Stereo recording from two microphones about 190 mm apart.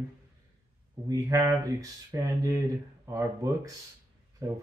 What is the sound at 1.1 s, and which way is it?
Speech, 15° right (ahead or behind).